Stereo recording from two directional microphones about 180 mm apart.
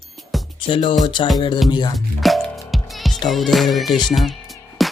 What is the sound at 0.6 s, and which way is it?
Speech, 30° left (ahead or behind).